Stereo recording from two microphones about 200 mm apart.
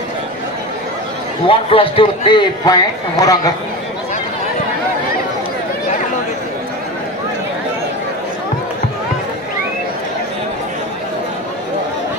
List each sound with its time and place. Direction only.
1.5 s a man's voice: 25° left (ahead or behind)